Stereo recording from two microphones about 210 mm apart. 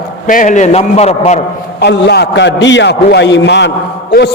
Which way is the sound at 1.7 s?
50° left (ahead or behind).